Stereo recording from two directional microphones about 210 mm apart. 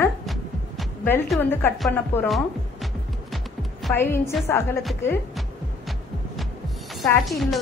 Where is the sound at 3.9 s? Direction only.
10° left (ahead or behind).